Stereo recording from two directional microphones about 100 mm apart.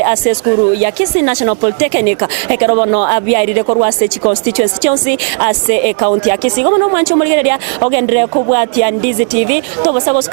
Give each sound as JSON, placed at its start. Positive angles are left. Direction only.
{"t": 0.0, "sound": "speech", "side_deg": -25}
{"t": 6.0, "sound": "speech", "side_deg": -30}